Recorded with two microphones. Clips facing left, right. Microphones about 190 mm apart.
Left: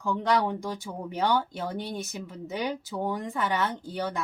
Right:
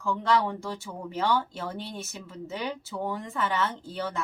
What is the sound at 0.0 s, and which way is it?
Speech, 15° left (ahead or behind).